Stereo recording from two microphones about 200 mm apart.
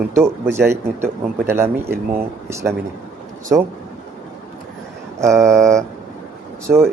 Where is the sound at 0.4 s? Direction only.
15° right (ahead or behind).